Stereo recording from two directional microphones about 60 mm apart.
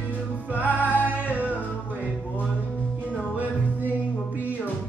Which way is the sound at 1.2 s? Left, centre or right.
Right.